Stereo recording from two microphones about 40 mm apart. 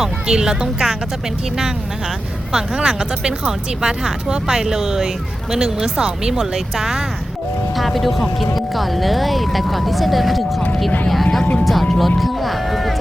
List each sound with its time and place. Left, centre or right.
0.0 s speech: centre
2.5 s speech: centre
7.8 s speech: centre